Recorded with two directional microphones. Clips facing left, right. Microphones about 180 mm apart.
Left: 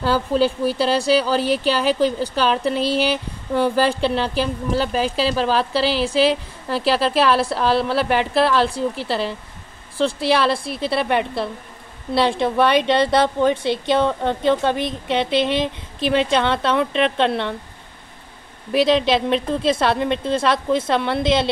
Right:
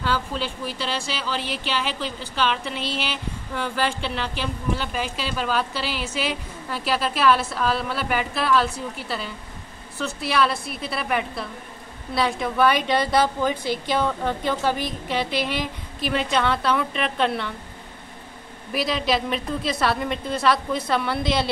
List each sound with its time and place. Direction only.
0.0 s a woman's voice: 40° left (ahead or behind)
18.7 s a woman's voice: 25° left (ahead or behind)